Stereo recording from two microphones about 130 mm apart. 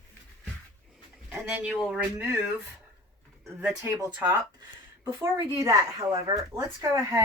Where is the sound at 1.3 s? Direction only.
10° right (ahead or behind).